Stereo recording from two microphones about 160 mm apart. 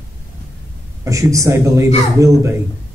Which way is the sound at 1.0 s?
20° right (ahead or behind).